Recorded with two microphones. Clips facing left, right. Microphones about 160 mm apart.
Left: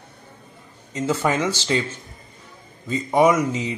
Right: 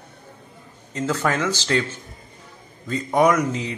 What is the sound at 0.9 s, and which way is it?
Speech, 10° left (ahead or behind).